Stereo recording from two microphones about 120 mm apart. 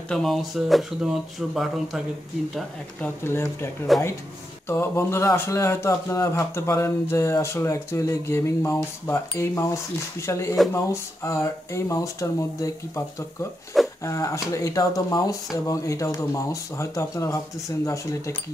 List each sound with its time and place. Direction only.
0.1 s speech: centre (ahead or behind)
3.0 s speech: 20° left (ahead or behind)
3.9 s speech: centre (ahead or behind)
4.6 s speech: 20° left (ahead or behind)